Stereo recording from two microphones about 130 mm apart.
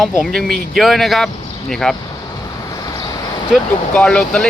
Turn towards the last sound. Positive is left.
turn(degrees=5)  # may be behind; listen again after turning